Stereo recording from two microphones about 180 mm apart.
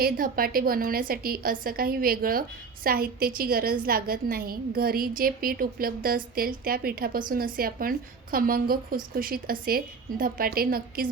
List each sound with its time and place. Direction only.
0.0 s a woman's voice: 55° right (ahead or behind)